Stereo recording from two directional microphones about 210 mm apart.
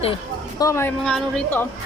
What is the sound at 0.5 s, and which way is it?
Speech, 15° left (ahead or behind).